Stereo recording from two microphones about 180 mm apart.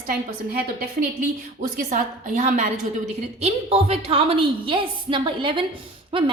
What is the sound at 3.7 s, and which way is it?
A woman's voice, 35° right (ahead or behind).